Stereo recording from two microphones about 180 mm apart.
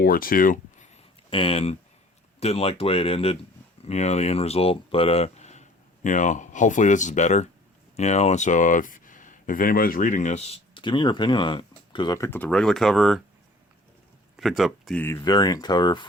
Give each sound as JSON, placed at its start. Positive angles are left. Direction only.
{"t": 0.0, "sound": "speech", "side_deg": 55}
{"t": 1.3, "sound": "speech", "side_deg": 30}
{"t": 14.3, "sound": "speech", "side_deg": 0}
{"t": 15.0, "sound": "speech", "side_deg": 15}